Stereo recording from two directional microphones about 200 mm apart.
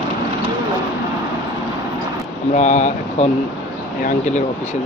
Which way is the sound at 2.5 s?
35° left (ahead or behind).